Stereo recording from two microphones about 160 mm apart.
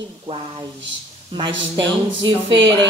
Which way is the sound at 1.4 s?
30° right (ahead or behind).